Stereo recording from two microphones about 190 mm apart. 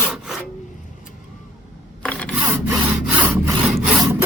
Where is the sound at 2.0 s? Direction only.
5° left (ahead or behind).